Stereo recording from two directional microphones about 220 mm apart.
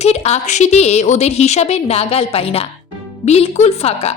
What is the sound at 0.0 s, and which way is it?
A woman's voice, 30° left (ahead or behind).